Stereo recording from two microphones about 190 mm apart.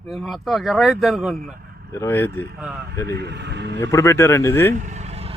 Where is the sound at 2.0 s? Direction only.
10° left (ahead or behind).